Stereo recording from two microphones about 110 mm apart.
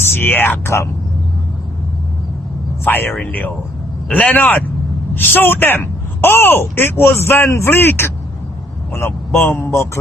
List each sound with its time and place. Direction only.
0.0 s speech: 20° left (ahead or behind)
2.8 s speech: 20° left (ahead or behind)
9.5 s speech: 20° left (ahead or behind)